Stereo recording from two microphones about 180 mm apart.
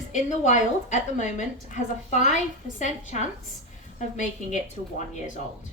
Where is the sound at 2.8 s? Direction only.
40° left (ahead or behind).